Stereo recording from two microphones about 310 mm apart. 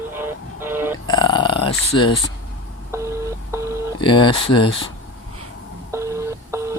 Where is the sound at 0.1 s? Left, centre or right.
Centre.